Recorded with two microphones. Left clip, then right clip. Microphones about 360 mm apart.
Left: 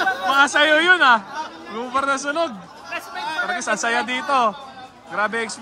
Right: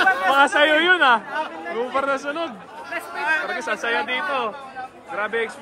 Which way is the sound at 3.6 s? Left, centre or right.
Centre.